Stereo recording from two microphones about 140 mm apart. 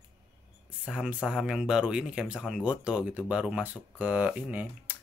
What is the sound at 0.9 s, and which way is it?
Speech, 5° right (ahead or behind).